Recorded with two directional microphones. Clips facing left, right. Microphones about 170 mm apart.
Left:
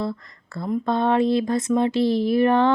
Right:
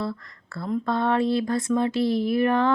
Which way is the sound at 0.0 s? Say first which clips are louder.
Left 2 dB; 20° left (ahead or behind).